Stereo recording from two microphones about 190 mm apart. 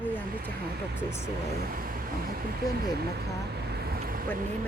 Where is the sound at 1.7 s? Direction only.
50° right (ahead or behind).